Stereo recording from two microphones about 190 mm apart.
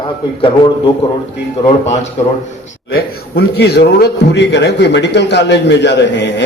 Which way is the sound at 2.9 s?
55° left (ahead or behind).